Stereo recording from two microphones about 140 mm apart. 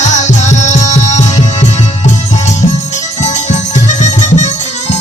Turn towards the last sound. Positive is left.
turn(degrees=55)  # may be behind; listen again after turning